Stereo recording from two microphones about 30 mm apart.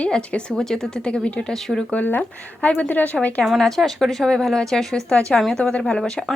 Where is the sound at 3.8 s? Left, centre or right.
Right.